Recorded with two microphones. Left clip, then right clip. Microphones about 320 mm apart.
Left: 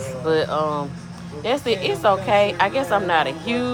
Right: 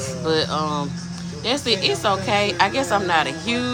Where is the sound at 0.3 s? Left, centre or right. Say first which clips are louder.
Left 1 dB; centre.